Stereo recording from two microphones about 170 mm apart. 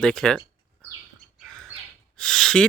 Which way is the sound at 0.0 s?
5° left (ahead or behind).